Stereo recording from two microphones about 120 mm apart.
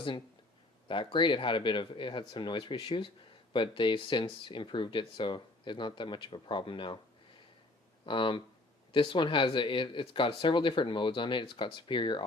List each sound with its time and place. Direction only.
0.9 s speech: 45° left (ahead or behind)
8.0 s speech: 45° left (ahead or behind)